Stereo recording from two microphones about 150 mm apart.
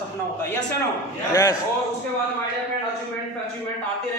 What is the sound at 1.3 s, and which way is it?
Speech, 20° left (ahead or behind).